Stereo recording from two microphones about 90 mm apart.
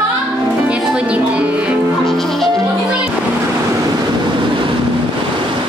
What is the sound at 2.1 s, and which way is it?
Music, 5° left (ahead or behind).